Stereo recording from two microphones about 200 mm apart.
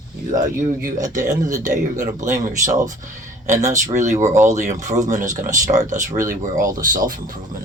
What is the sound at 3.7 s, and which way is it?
Speech, 15° right (ahead or behind).